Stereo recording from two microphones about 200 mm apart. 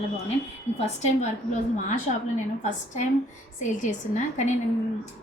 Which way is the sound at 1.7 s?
40° left (ahead or behind).